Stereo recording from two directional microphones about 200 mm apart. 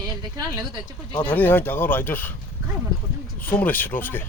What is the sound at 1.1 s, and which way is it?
Speech, 10° left (ahead or behind).